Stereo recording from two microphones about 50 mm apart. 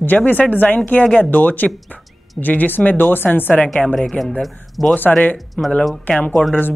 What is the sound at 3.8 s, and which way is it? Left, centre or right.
Speech, centre.